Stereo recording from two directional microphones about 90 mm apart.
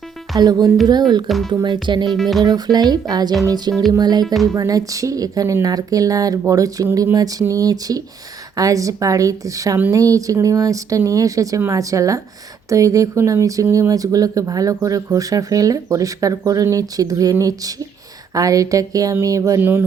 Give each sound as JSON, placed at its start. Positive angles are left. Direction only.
{"t": 0.3, "sound": "speech", "side_deg": -45}
{"t": 1.3, "sound": "speech", "side_deg": 0}
{"t": 1.6, "sound": "speech", "side_deg": -55}
{"t": 2.1, "sound": "speech", "side_deg": 5}
{"t": 2.4, "sound": "speech", "side_deg": -50}